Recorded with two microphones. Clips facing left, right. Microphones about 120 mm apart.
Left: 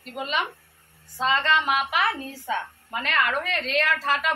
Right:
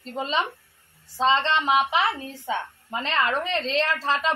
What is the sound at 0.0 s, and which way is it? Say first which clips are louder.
A woman's voice: right 2 dB; 30° right (ahead or behind).